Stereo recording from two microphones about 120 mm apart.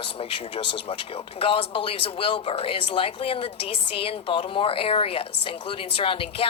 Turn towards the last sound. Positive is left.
turn(degrees=50)  # may be behind; listen again after turning